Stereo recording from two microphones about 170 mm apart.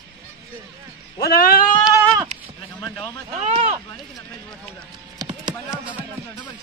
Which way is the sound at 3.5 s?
40° right (ahead or behind).